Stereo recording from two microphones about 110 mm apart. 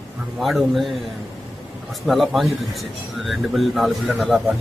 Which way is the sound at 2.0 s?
Centre (ahead or behind).